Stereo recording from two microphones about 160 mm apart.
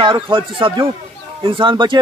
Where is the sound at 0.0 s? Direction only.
30° right (ahead or behind).